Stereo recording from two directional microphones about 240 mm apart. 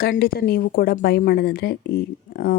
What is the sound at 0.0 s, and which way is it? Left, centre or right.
Speech, left.